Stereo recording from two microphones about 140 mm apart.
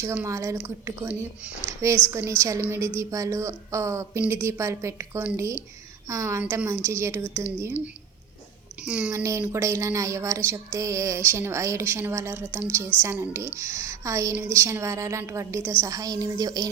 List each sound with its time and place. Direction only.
0.0 s speech: 15° right (ahead or behind)
6.4 s a woman's voice: 10° right (ahead or behind)
8.8 s a woman's voice: 10° right (ahead or behind)
9.1 s speech: 20° right (ahead or behind)